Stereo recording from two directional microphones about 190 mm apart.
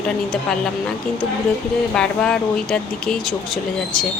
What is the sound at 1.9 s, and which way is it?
Speech, 5° left (ahead or behind).